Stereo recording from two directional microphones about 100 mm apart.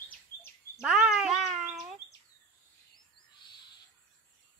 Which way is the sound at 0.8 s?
5° right (ahead or behind).